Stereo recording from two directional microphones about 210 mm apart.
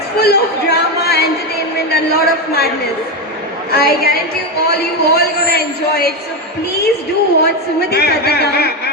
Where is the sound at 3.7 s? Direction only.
45° left (ahead or behind).